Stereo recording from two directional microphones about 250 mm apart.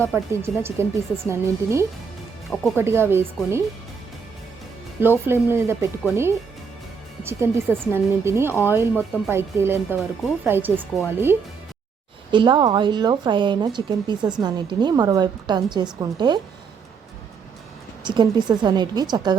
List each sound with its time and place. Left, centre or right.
0.1 s speech: centre
5.2 s speech: centre
18.0 s speech: centre